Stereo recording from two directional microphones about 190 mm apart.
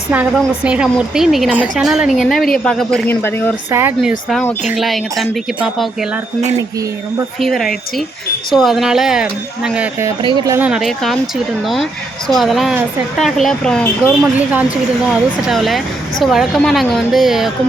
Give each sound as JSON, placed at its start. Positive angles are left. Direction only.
{"t": 0.1, "sound": "a woman's voice", "side_deg": -5}
{"t": 3.7, "sound": "speech", "side_deg": -10}
{"t": 4.3, "sound": "a woman's voice", "side_deg": 5}
{"t": 7.3, "sound": "a woman's voice", "side_deg": 0}
{"t": 10.2, "sound": "speech", "side_deg": -20}
{"t": 10.7, "sound": "a woman's voice", "side_deg": 0}
{"t": 14.2, "sound": "a woman's voice", "side_deg": -5}